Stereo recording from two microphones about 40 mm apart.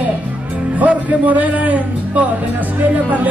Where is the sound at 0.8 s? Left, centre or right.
Right.